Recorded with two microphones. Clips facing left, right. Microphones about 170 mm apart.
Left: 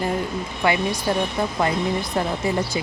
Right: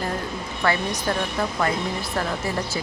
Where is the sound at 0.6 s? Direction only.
15° left (ahead or behind).